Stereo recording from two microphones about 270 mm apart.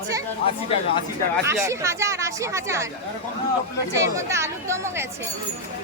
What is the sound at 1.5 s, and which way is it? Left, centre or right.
A woman's voice, centre.